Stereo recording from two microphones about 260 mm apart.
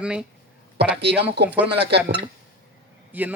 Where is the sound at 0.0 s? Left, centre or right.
Centre.